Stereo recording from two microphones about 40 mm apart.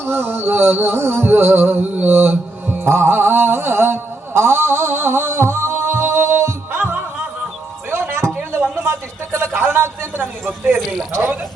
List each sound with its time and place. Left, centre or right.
0.0 s music: right
1.8 s mantra: right
2.1 s mantra: right
7.9 s music: right
8.7 s a sound: right
9.6 s a man's voice: right
11.1 s speech: right